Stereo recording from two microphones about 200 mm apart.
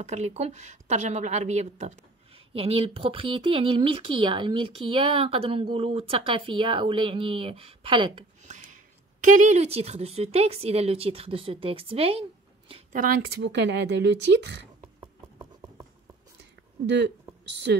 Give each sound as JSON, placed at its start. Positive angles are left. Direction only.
{"t": 0.0, "sound": "speech", "side_deg": -35}
{"t": 12.9, "sound": "speech", "side_deg": -45}
{"t": 14.8, "sound": "a sound", "side_deg": -20}